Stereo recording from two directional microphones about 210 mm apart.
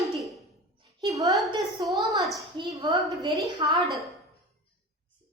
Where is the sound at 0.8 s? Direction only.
15° right (ahead or behind).